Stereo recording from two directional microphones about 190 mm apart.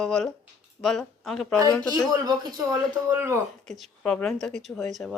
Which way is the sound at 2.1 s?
20° right (ahead or behind).